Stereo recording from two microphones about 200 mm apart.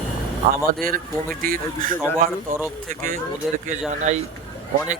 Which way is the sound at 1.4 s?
45° right (ahead or behind).